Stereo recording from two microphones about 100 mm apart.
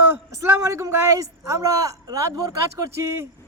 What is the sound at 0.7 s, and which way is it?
A man's voice, 30° right (ahead or behind).